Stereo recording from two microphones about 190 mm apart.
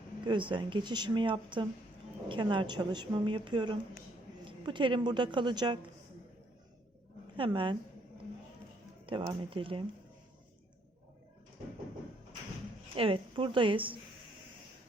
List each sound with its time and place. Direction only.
0.3 s a woman's voice: 25° right (ahead or behind)
7.3 s a woman's voice: 25° right (ahead or behind)
9.0 s a woman's voice: 25° right (ahead or behind)
13.0 s a woman's voice: 30° right (ahead or behind)